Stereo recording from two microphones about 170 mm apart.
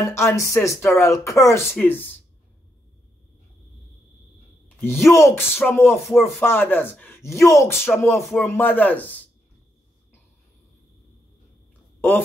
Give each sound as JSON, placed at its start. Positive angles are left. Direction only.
{"t": 0.0, "sound": "speech", "side_deg": 15}
{"t": 5.0, "sound": "speech", "side_deg": 15}